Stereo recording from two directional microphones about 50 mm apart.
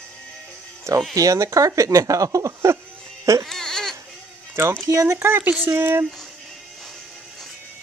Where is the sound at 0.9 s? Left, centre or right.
Right.